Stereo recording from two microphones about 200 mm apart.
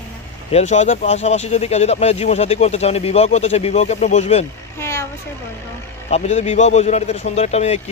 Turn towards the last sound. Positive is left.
turn(degrees=35)  # may be behind; listen again after turning